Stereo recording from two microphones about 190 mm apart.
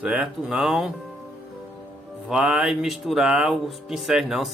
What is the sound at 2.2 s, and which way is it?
Speech, 5° right (ahead or behind).